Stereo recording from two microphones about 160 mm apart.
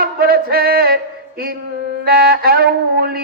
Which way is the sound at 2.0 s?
70° right (ahead or behind).